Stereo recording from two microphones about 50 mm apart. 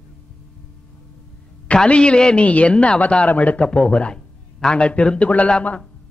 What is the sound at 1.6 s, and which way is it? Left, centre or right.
A man's voice, left.